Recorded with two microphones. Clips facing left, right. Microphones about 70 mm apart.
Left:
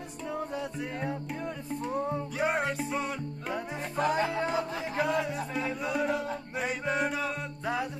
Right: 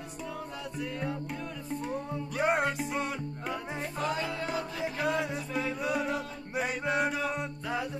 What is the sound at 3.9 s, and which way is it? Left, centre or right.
Music, left.